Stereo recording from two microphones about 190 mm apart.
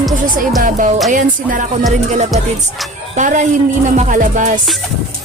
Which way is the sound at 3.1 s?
40° right (ahead or behind).